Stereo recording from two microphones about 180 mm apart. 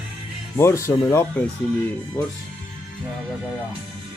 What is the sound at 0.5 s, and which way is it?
Speech, 15° left (ahead or behind).